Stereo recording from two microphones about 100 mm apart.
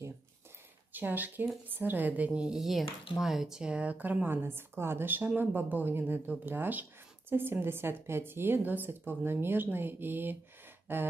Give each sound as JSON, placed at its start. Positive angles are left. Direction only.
{"t": 0.9, "sound": "a woman's voice", "side_deg": -20}